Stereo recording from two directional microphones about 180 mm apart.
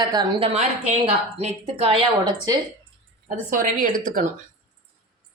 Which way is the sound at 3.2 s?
50° right (ahead or behind).